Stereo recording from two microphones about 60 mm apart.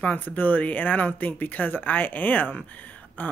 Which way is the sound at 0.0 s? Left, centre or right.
Left.